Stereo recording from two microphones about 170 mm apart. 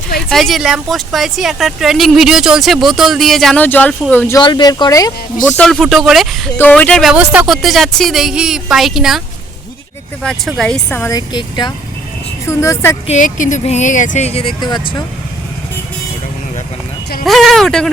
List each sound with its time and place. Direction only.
0.3 s speech: centre (ahead or behind)
4.4 s speech: 25° left (ahead or behind)
5.5 s speech: 5° left (ahead or behind)
10.6 s speech: 5° left (ahead or behind)
11.0 s speech: 25° left (ahead or behind)
13.1 s speech: 45° left (ahead or behind); by 15.0 s 25° left (ahead or behind)
17.2 s speech: centre (ahead or behind)